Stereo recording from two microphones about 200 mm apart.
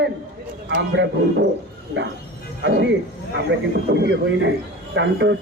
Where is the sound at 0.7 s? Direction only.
60° right (ahead or behind).